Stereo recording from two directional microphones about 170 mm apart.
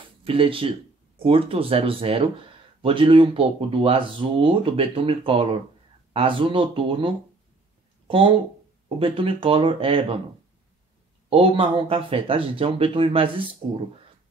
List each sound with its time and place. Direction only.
0.2 s speech: 30° right (ahead or behind)
8.8 s speech: 30° right (ahead or behind)
11.2 s speech: 35° right (ahead or behind)